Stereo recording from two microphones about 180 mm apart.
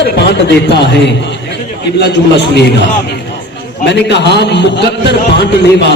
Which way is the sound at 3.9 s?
70° left (ahead or behind).